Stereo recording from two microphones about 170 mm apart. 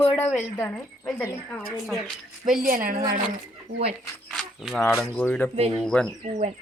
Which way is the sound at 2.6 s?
55° right (ahead or behind).